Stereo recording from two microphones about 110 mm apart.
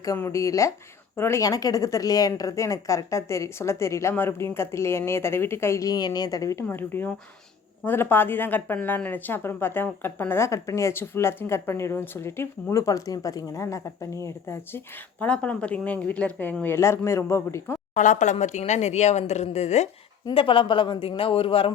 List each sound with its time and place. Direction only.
0.2 s a woman's voice: 30° left (ahead or behind)
15.2 s a woman's voice: 10° left (ahead or behind)
16.6 s a woman's voice: 25° left (ahead or behind)
18.2 s a woman's voice: 90° left
20.3 s speech: 50° left (ahead or behind)